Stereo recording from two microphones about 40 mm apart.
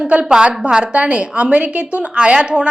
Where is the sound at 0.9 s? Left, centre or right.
Right.